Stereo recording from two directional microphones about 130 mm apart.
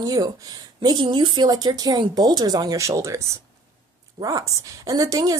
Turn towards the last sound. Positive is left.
turn(degrees=-30)  # may be behind; listen again after turning